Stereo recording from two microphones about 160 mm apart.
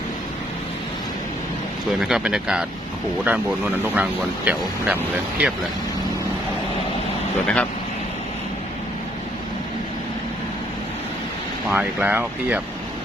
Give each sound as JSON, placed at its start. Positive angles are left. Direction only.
{"t": 2.0, "sound": "speech", "side_deg": -5}
{"t": 7.4, "sound": "speech", "side_deg": 10}
{"t": 11.7, "sound": "speech", "side_deg": -10}